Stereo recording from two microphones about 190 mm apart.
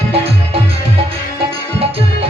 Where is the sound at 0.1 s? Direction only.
30° right (ahead or behind).